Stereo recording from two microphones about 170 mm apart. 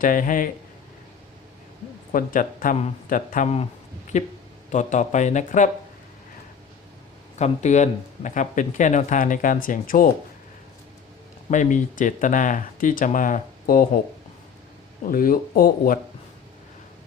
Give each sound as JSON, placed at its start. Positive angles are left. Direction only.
{"t": 0.0, "sound": "speech", "side_deg": 55}
{"t": 2.1, "sound": "speech", "side_deg": 55}
{"t": 7.3, "sound": "speech", "side_deg": 40}
{"t": 11.5, "sound": "speech", "side_deg": 45}
{"t": 15.0, "sound": "speech", "side_deg": 55}